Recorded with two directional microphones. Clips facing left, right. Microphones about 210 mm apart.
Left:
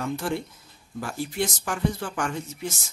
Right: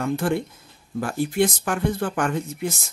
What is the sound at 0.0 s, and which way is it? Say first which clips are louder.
Speech: right 5 dB; 55° right (ahead or behind).